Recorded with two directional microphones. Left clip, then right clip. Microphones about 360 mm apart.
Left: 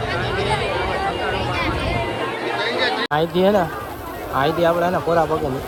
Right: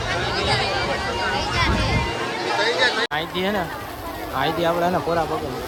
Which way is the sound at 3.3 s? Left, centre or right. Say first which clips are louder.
Left 7 dB; centre.